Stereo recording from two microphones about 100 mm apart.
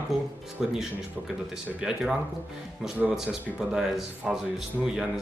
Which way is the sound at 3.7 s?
5° right (ahead or behind).